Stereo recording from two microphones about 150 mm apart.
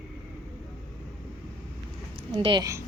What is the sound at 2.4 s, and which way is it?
Speech, 35° right (ahead or behind).